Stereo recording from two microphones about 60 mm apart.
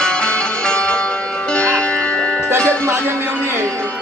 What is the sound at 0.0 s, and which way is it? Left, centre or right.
Music, centre.